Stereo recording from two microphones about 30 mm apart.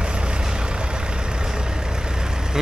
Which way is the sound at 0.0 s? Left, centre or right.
Right.